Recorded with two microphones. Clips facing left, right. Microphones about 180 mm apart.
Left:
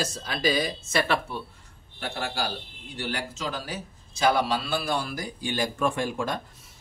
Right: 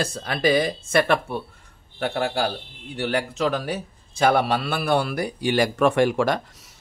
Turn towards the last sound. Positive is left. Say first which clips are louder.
# right 8 dB
turn(degrees=-80)